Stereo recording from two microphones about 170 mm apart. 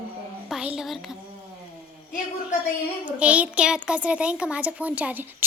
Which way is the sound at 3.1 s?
5° right (ahead or behind).